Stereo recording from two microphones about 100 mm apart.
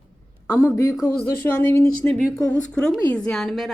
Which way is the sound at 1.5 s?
20° left (ahead or behind).